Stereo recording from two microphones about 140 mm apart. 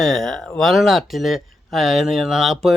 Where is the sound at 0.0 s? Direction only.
Centre (ahead or behind).